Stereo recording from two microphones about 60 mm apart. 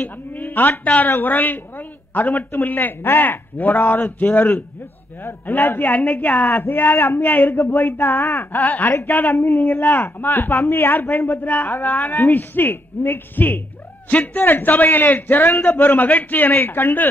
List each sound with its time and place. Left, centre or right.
0.0 s a man's voice: left